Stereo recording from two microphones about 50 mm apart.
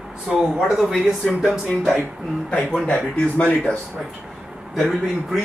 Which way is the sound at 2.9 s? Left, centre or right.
Left.